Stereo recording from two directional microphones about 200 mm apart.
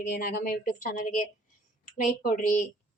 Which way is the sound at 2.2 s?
45° left (ahead or behind).